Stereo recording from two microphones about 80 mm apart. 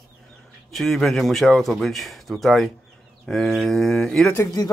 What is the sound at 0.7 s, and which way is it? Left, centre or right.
Speech, centre.